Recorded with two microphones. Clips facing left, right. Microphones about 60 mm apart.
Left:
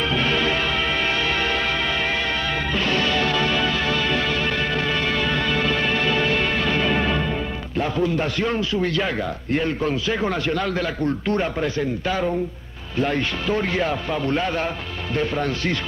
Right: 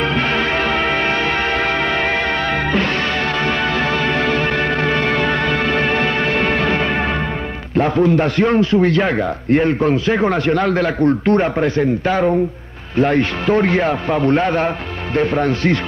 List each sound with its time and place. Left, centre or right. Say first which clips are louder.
0.1 s music: right 3 dB; right
2.7 s music: right 3 dB; right
7.7 s a man's voice: right 8 dB; right